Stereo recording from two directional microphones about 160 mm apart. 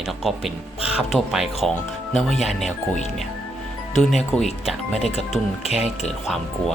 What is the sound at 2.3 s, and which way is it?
Speech, 45° left (ahead or behind).